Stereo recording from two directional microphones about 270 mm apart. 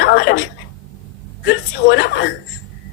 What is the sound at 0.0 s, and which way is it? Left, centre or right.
Speech, left.